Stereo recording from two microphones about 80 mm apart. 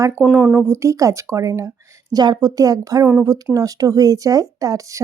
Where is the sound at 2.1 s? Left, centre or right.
Right.